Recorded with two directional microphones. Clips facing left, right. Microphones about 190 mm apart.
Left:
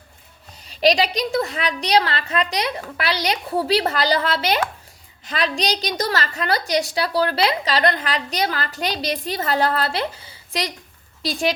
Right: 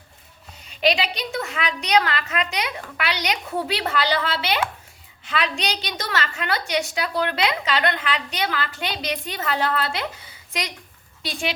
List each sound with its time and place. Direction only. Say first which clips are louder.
0.6 s a woman's voice: left 4 dB; 35° left (ahead or behind)